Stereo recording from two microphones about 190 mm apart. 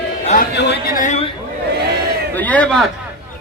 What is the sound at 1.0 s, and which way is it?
Speech, 35° left (ahead or behind).